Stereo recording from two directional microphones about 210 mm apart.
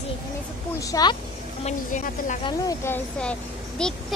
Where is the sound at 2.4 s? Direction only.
15° left (ahead or behind).